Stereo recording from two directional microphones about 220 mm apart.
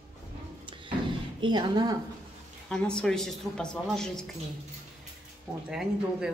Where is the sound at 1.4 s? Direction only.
20° right (ahead or behind).